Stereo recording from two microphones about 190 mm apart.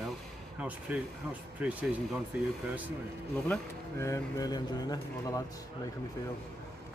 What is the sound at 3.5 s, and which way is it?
Speech, 15° left (ahead or behind).